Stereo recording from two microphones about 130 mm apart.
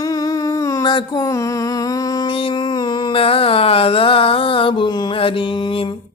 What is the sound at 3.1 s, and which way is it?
Music, 45° left (ahead or behind).